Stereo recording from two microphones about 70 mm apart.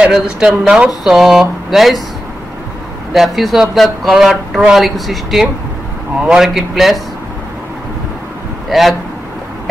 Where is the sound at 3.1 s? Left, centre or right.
Centre.